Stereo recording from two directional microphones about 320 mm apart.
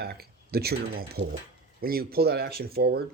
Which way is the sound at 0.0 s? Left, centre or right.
Right.